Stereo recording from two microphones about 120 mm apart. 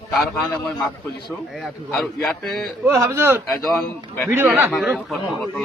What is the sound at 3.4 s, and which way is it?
Speech, 5° left (ahead or behind).